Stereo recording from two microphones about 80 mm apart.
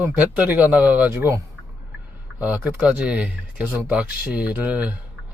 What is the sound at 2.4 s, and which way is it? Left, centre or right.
Speech, centre.